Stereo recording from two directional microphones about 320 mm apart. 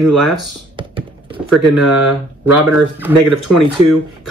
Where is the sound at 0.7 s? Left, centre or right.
Centre.